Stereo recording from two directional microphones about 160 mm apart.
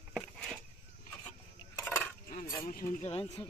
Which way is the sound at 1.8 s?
10° left (ahead or behind).